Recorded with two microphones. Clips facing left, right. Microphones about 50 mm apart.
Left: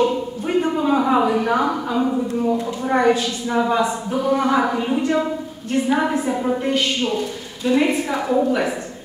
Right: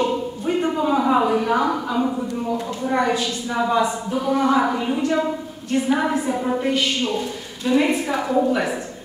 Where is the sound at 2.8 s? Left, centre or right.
Left.